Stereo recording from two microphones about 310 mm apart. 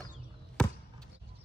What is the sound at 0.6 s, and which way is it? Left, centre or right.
Basketball bounce, centre.